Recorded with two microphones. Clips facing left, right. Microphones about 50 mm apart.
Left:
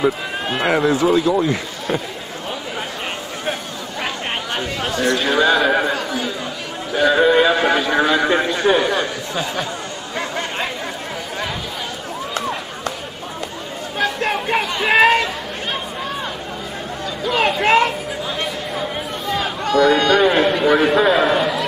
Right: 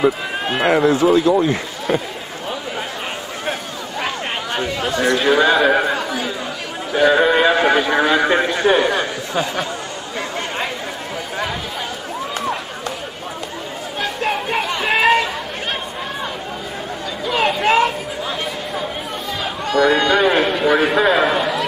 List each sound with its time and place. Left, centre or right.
0.0 s speech: centre
1.4 s speech: right
5.4 s a man's voice: centre
6.0 s chatter: centre
6.9 s a man's voice: centre
9.3 s speech: right
13.9 s chatter: centre
17.3 s a sound: centre
19.7 s a man's voice: centre